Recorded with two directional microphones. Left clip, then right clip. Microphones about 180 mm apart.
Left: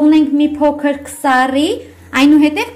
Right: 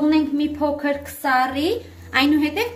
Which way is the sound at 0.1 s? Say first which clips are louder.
Left 8 dB; 35° left (ahead or behind).